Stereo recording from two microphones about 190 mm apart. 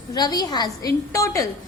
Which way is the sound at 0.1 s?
20° left (ahead or behind).